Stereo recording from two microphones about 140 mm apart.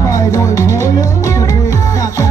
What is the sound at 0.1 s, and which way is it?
Music, 25° left (ahead or behind).